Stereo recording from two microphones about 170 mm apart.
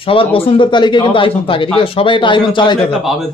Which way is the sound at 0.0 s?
35° left (ahead or behind).